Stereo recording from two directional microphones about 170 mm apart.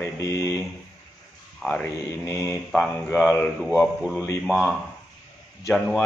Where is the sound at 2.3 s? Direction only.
20° left (ahead or behind).